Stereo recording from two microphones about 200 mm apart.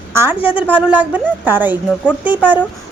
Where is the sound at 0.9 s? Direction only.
10° right (ahead or behind).